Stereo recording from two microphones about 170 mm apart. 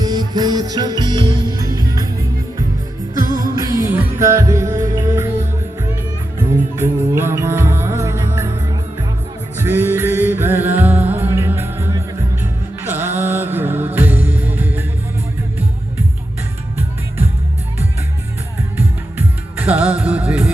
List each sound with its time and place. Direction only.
0.0 s music: 25° right (ahead or behind)
3.2 s music: 20° right (ahead or behind)
6.5 s music: 15° right (ahead or behind)
18.8 s music: 10° right (ahead or behind)